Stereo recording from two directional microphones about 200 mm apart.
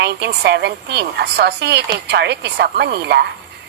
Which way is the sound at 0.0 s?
55° right (ahead or behind).